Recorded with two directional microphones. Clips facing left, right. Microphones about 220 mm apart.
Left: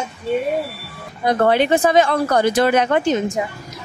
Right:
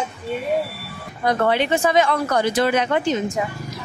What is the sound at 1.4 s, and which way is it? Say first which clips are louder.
Speech: left 5 dB; 40° left (ahead or behind).